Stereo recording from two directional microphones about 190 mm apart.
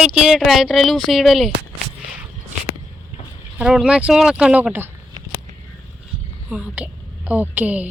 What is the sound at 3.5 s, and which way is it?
Speech, 5° right (ahead or behind).